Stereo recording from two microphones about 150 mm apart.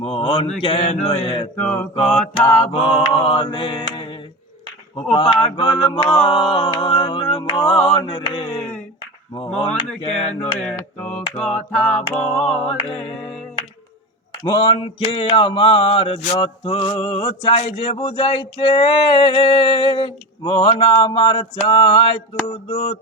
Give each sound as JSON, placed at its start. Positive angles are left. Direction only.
{"t": 0.0, "sound": "mantra", "side_deg": 35}
{"t": 1.5, "sound": "mantra", "side_deg": 10}
{"t": 3.1, "sound": "mantra", "side_deg": 35}
{"t": 10.0, "sound": "mantra", "side_deg": 40}
{"t": 10.6, "sound": "mantra", "side_deg": 10}
{"t": 11.3, "sound": "a capella", "side_deg": 5}
{"t": 12.4, "sound": "mantra", "side_deg": 40}
{"t": 14.4, "sound": "mantra", "side_deg": 35}